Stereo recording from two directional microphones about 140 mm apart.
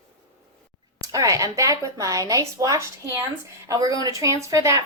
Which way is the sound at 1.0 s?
25° right (ahead or behind).